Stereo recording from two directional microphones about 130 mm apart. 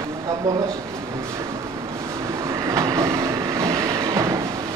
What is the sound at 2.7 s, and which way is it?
Train, 25° right (ahead or behind).